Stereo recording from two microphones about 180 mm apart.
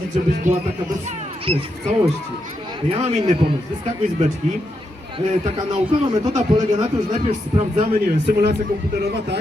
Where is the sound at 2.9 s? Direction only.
25° right (ahead or behind).